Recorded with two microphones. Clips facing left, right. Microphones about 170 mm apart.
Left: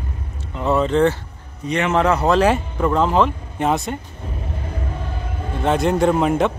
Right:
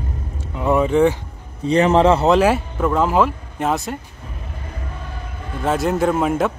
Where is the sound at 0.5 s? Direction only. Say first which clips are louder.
Right 1 dB; 10° right (ahead or behind).